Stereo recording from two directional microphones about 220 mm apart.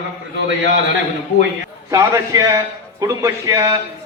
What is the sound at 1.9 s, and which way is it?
A man's voice, 15° right (ahead or behind).